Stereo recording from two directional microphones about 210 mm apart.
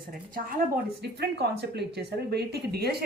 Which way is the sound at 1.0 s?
50° right (ahead or behind).